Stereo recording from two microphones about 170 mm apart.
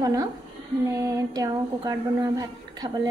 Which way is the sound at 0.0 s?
20° right (ahead or behind).